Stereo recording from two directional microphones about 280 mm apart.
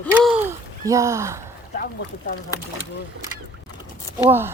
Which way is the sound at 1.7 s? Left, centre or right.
Left.